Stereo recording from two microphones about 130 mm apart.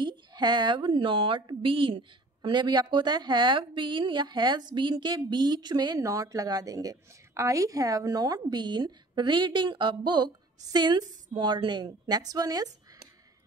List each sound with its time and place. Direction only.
0.0 s a woman's voice: 35° right (ahead or behind)